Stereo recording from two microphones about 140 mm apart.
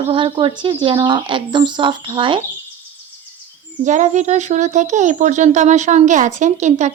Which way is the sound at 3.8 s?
60° right (ahead or behind).